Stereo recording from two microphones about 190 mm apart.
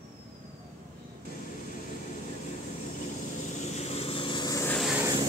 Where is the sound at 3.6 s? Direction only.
35° left (ahead or behind); by 4.8 s 15° left (ahead or behind).